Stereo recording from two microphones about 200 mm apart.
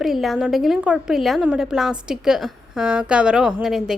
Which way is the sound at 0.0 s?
Centre (ahead or behind).